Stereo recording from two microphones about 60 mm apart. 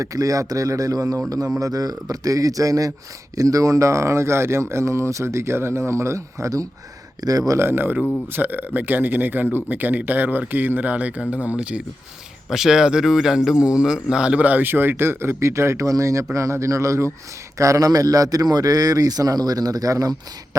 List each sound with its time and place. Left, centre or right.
0.0 s speech: right
7.2 s speech: right
7.6 s a man's voice: right; by 11.8 s centre
12.5 s speech: centre; by 17.1 s right
17.6 s speech: right